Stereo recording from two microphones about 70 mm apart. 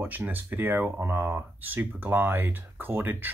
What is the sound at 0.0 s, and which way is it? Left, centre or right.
Speech, right.